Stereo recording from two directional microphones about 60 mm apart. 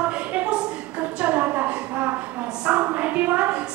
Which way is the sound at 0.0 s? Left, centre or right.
Right.